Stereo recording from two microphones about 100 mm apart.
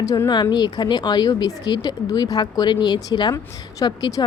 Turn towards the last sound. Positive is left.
turn(degrees=40)  # may be behind; listen again after turning